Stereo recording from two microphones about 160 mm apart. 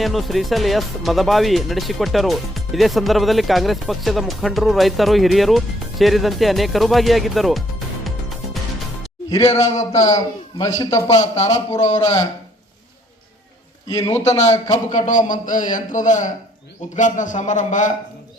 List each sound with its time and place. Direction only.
0.0 s speech: centre (ahead or behind)
9.5 s a man's voice: 45° left (ahead or behind)
10.2 s a man's voice: 25° left (ahead or behind)
11.1 s a man's voice: 45° left (ahead or behind)
11.4 s a man's voice: 20° left (ahead or behind)
13.8 s a man's voice: 25° left (ahead or behind)
14.1 s a man's voice: 45° left (ahead or behind)